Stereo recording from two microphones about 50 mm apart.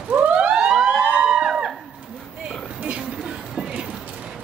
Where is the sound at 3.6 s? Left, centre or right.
Centre.